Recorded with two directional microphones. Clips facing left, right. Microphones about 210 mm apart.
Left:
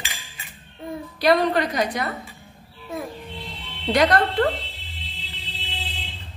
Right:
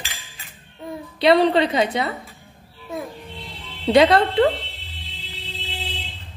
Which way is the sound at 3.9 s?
25° right (ahead or behind).